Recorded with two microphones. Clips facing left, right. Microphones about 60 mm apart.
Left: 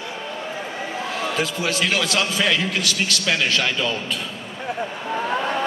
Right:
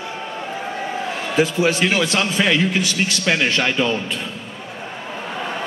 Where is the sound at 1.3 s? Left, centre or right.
Centre.